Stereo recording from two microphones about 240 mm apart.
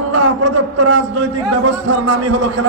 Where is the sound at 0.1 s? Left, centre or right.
Right.